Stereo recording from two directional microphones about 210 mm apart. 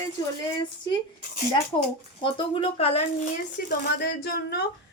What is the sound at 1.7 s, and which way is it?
Speech, 15° left (ahead or behind).